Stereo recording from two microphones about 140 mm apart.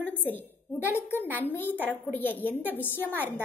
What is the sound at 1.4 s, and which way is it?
A woman's voice, 15° left (ahead or behind).